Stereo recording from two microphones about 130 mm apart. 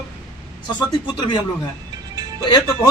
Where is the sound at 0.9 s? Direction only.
35° left (ahead or behind).